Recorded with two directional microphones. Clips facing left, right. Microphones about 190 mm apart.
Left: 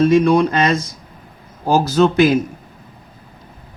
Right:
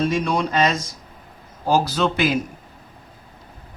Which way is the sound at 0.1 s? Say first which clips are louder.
Left 9 dB; 55° left (ahead or behind).